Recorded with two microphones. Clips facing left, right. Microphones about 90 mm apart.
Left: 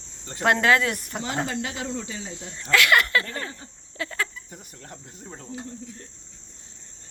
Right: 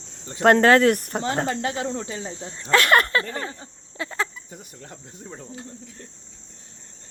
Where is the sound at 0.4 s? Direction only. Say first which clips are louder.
Right 6 dB; 45° right (ahead or behind); by 2.8 s 30° right (ahead or behind).